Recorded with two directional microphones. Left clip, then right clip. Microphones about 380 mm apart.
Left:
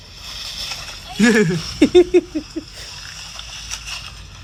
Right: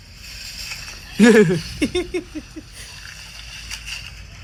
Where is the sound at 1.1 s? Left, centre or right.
Centre.